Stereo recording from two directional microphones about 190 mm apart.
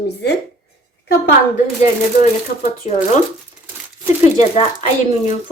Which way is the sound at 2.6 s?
40° left (ahead or behind).